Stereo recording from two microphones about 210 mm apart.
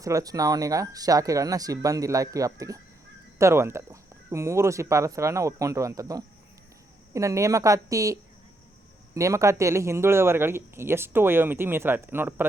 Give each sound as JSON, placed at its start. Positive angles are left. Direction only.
{"t": 0.0, "sound": "speech", "side_deg": -15}